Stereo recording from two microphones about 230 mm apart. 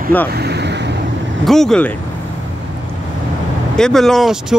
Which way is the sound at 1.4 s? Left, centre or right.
Centre.